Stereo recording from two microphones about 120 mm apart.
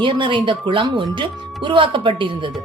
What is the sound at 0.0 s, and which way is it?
A woman's voice, 45° right (ahead or behind).